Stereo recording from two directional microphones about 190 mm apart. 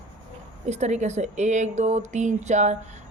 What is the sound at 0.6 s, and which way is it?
A woman's voice, 35° right (ahead or behind).